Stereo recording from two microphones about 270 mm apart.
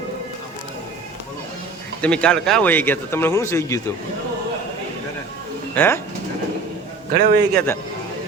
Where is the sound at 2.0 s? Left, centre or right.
Centre.